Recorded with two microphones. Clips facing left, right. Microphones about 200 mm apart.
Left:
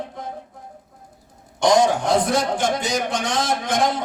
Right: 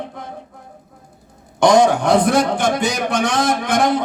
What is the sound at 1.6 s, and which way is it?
A man's voice, 65° right (ahead or behind).